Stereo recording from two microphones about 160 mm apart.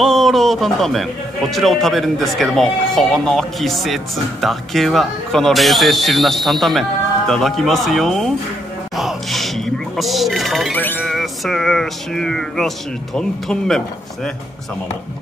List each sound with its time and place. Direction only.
0.0 s speech: centre (ahead or behind)
8.9 s music: centre (ahead or behind)
10.8 s music: 10° left (ahead or behind)
11.1 s speech: centre (ahead or behind)